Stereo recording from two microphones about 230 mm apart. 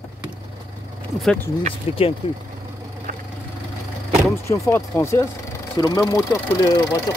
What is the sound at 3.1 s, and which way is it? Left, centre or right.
Vehicle, right.